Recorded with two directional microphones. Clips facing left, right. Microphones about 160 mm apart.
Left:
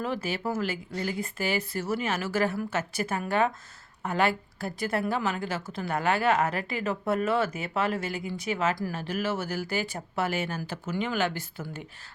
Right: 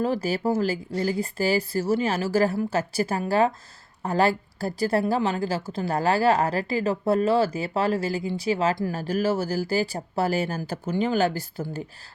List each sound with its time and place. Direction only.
0.0 s a woman's voice: 35° right (ahead or behind)